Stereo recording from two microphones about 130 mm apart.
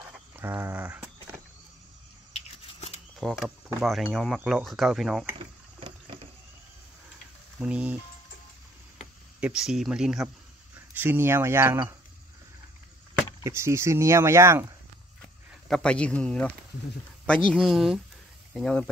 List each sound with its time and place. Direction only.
0.0 s a sound: 15° right (ahead or behind)
3.2 s speech: centre (ahead or behind)
5.8 s vehicle: 40° right (ahead or behind)
7.6 s music: 10° right (ahead or behind)
9.4 s speech: 5° right (ahead or behind)
10.9 s speech: 15° right (ahead or behind)
13.4 s speech: 20° right (ahead or behind)
15.7 s speech: 10° left (ahead or behind)